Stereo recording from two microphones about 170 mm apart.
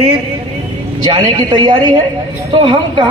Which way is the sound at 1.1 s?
25° right (ahead or behind).